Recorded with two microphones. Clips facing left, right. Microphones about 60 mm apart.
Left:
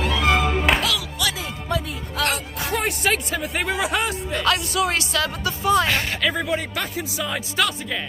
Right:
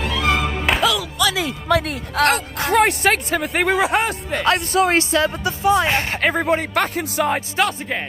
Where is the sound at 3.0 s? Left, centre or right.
Right.